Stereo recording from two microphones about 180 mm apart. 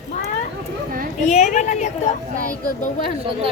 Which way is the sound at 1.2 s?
40° left (ahead or behind).